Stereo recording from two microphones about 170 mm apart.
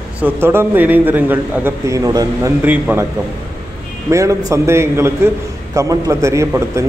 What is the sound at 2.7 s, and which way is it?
Speech, 10° right (ahead or behind).